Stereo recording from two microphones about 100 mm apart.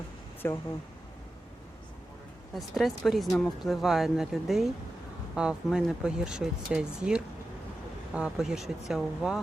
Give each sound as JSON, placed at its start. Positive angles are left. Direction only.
{"t": 0.4, "sound": "speech", "side_deg": 20}
{"t": 2.6, "sound": "speech", "side_deg": 0}